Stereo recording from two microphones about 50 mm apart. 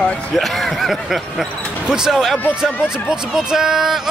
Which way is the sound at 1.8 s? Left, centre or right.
Centre.